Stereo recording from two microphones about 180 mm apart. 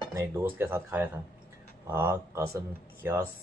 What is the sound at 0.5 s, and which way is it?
Speech, 10° right (ahead or behind).